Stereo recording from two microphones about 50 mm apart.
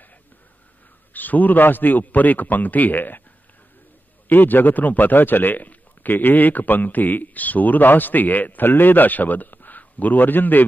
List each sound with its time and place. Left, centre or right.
1.1 s a man's voice: left
4.3 s a man's voice: left